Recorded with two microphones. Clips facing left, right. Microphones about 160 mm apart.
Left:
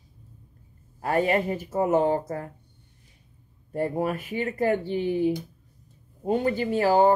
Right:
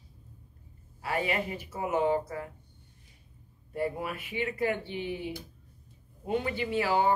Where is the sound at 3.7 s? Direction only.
45° left (ahead or behind).